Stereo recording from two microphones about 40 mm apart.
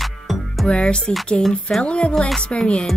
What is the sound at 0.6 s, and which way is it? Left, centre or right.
Speech, left.